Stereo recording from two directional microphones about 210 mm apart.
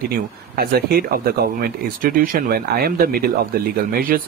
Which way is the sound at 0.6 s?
45° right (ahead or behind).